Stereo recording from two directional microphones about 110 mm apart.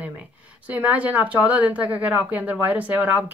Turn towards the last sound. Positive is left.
turn(degrees=-15)  # may be behind; listen again after turning